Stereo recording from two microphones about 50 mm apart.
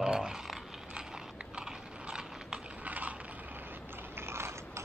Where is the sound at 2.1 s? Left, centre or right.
Centre.